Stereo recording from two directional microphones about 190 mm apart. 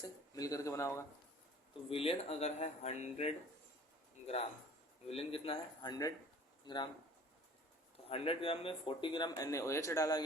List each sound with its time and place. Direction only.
0.3 s speech: 20° left (ahead or behind)
1.9 s speech: 30° left (ahead or behind)
5.0 s speech: 30° left (ahead or behind)
8.1 s speech: 30° left (ahead or behind)